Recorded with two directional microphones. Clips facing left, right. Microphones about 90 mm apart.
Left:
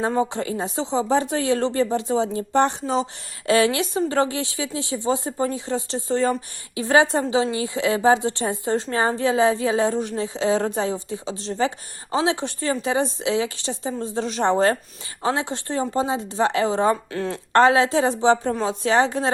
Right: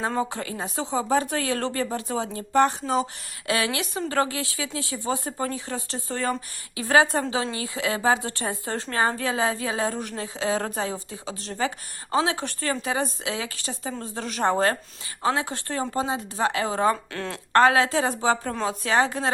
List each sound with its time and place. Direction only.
0.0 s speech: 20° left (ahead or behind)
17.1 s speech: 5° left (ahead or behind)
17.5 s speech: 30° left (ahead or behind)